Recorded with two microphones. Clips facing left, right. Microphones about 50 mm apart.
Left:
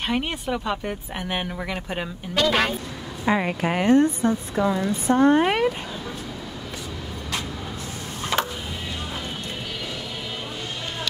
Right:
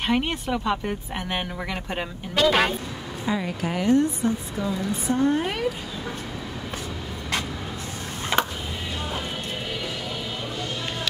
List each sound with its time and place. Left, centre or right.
0.0 s speech: centre
3.3 s a woman's voice: left
8.3 s a sound: centre